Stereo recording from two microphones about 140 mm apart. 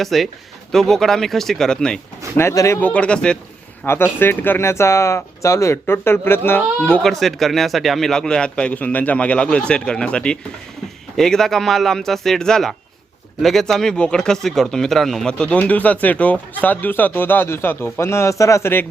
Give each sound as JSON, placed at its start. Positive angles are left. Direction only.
{"t": 0.0, "sound": "speech", "side_deg": 0}
{"t": 2.4, "sound": "speech", "side_deg": 20}
{"t": 2.9, "sound": "speech", "side_deg": 10}
{"t": 7.0, "sound": "speech", "side_deg": 0}